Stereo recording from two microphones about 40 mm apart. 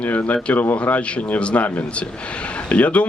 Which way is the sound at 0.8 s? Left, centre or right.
Left.